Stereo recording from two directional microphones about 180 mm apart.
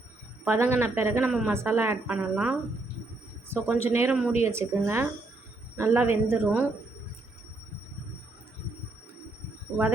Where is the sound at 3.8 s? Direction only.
10° right (ahead or behind).